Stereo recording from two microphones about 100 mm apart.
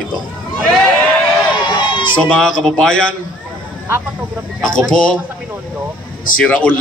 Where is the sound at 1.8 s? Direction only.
50° left (ahead or behind).